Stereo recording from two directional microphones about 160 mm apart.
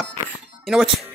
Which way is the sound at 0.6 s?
Centre (ahead or behind).